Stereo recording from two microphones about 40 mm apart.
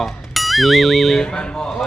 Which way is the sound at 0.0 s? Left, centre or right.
Centre.